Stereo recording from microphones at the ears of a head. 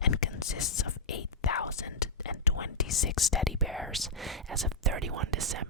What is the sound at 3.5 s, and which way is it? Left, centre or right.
Whispering, centre.